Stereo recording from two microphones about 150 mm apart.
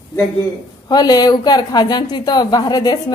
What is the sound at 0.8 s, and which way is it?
A woman's voice, 25° left (ahead or behind).